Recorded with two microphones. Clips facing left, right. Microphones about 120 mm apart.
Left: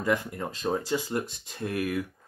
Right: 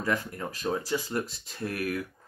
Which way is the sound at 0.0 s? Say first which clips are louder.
Left 3 dB; 15° left (ahead or behind).